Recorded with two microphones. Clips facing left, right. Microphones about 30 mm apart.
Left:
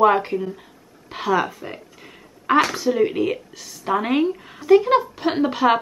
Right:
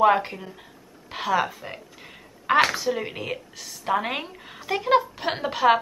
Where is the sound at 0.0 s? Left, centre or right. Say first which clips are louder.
Left 3 dB; centre.